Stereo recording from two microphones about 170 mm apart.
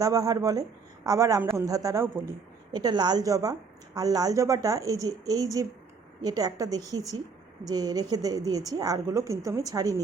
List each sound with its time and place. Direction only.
0.0 s a woman's voice: 20° right (ahead or behind)